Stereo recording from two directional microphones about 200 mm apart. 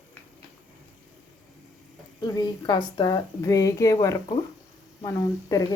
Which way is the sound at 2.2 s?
20° left (ahead or behind).